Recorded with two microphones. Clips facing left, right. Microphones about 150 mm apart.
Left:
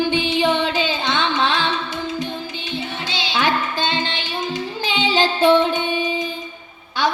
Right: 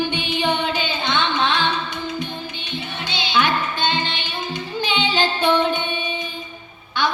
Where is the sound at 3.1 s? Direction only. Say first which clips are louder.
Even; 90° left.